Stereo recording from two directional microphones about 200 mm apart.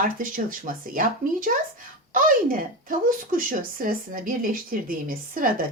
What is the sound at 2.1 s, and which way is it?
A woman's voice, 40° right (ahead or behind).